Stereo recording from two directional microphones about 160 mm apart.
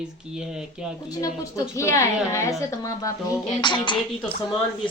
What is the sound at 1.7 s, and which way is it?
A woman's voice, 20° left (ahead or behind).